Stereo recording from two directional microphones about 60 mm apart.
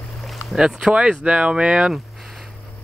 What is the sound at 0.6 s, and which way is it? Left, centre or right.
Speech, centre.